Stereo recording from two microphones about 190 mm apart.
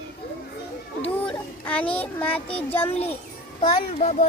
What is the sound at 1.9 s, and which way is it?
Child singing, 10° left (ahead or behind).